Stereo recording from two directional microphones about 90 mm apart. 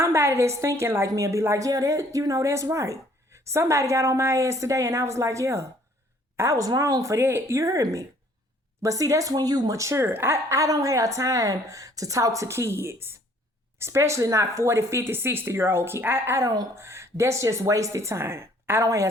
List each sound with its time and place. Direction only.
0.0 s a woman's voice: 30° right (ahead or behind)